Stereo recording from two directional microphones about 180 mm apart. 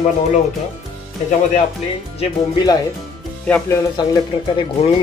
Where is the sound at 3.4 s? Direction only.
5° left (ahead or behind).